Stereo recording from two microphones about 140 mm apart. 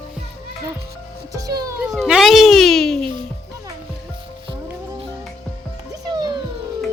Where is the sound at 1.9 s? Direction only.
Centre (ahead or behind).